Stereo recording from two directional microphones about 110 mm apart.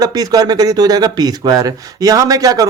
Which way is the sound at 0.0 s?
35° right (ahead or behind).